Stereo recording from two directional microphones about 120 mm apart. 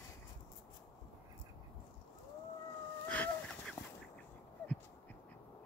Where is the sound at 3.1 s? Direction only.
10° left (ahead or behind).